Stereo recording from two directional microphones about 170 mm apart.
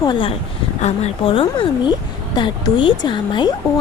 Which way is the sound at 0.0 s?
30° left (ahead or behind).